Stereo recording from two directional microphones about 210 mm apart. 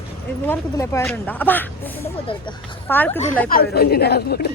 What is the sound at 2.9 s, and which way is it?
Speech, 10° left (ahead or behind).